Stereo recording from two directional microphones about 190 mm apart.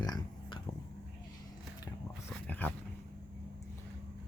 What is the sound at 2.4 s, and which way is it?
Dog, 10° left (ahead or behind).